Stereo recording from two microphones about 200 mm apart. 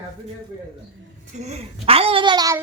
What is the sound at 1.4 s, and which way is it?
Speech, 30° right (ahead or behind).